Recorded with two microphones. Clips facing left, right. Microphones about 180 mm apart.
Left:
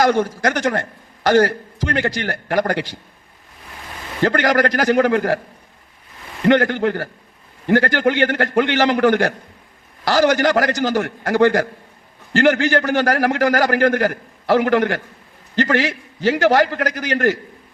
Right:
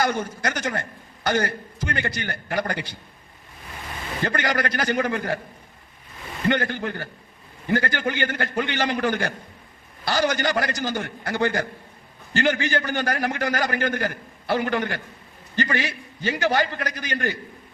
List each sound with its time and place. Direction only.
0.2 s a man's voice: 90° left
4.2 s a man's voice: 80° left
6.4 s a man's voice: 85° left